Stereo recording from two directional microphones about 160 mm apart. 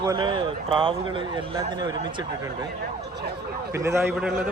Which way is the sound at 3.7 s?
15° right (ahead or behind).